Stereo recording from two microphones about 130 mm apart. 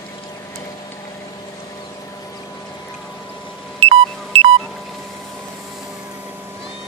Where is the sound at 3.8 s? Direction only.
50° right (ahead or behind).